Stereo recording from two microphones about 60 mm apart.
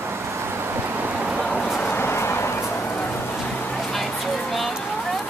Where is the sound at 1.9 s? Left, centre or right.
Left.